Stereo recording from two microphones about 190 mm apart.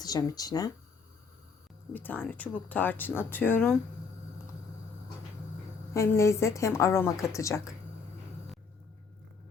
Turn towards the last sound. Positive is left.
turn(degrees=15)  # may be behind; listen again after turning